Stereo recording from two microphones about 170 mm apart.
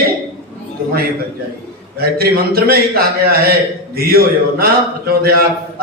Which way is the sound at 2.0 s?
65° right (ahead or behind).